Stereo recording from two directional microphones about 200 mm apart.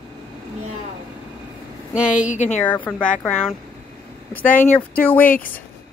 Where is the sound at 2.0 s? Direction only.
40° left (ahead or behind).